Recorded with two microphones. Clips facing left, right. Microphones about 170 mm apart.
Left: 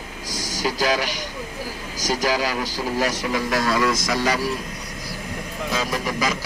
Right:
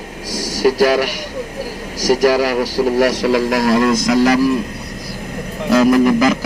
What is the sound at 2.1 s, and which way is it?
A man's voice, 70° right (ahead or behind).